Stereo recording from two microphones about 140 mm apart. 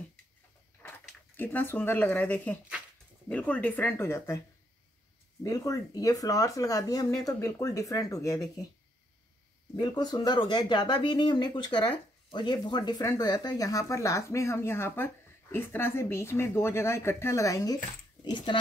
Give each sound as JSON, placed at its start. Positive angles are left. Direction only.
{"t": 1.3, "sound": "speech", "side_deg": 15}
{"t": 5.4, "sound": "speech", "side_deg": 25}
{"t": 9.8, "sound": "speech", "side_deg": 30}
{"t": 18.2, "sound": "speech", "side_deg": 35}